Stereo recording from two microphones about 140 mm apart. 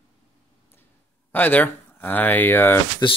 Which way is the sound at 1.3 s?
10° left (ahead or behind).